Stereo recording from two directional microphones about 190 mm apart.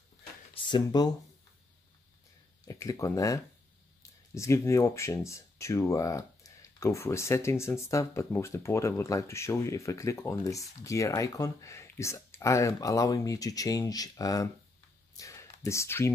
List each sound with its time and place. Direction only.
0.7 s speech: 20° left (ahead or behind)
2.6 s speech: 15° left (ahead or behind)
15.1 s a sound: 15° left (ahead or behind)